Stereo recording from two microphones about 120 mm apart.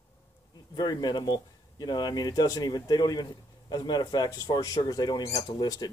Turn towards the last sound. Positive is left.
turn(degrees=35)  # may be behind; listen again after turning